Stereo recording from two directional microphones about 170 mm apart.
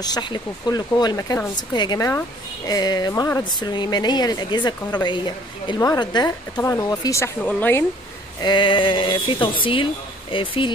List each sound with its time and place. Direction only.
0.0 s speech: 25° left (ahead or behind)
8.4 s speech: 25° left (ahead or behind)